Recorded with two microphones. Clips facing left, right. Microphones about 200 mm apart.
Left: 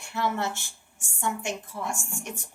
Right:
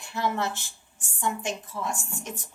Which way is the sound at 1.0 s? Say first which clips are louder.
Right 1 dB; 20° right (ahead or behind).